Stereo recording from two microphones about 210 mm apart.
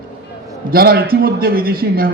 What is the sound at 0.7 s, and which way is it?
A man's voice, 45° right (ahead or behind).